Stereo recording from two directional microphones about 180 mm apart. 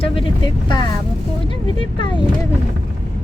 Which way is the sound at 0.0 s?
25° left (ahead or behind).